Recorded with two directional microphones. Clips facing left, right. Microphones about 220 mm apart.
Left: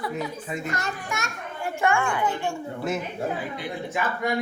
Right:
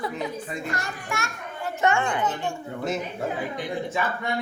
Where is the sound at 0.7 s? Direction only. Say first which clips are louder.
Left 1 dB; 20° left (ahead or behind).